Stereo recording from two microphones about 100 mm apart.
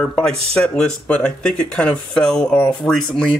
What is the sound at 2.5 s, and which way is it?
Speech, 15° left (ahead or behind).